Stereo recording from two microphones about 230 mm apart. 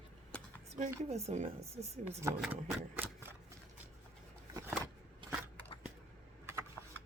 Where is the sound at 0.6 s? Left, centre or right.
Right.